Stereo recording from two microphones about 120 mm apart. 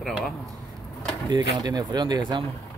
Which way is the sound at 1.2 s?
35° right (ahead or behind).